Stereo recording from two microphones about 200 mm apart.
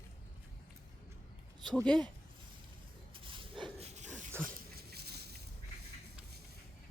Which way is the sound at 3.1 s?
25° right (ahead or behind).